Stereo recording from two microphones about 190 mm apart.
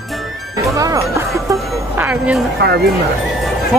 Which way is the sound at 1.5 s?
10° right (ahead or behind).